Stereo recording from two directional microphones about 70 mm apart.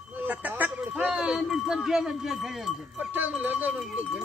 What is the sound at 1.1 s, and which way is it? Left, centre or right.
Speech, centre.